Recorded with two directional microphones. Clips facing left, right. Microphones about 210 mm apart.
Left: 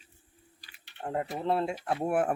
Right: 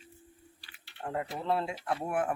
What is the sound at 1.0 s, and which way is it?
Speech, 25° left (ahead or behind).